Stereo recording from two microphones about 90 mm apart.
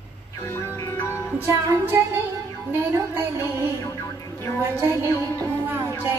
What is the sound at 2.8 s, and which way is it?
Speech, 30° right (ahead or behind).